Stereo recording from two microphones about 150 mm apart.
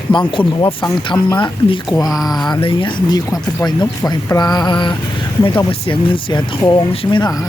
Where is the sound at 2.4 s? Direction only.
30° left (ahead or behind).